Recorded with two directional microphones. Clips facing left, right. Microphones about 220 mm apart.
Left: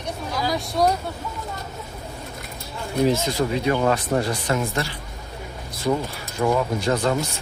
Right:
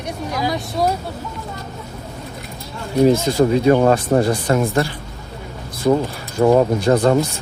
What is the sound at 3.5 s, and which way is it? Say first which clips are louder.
Speech: right 7 dB; 40° right (ahead or behind).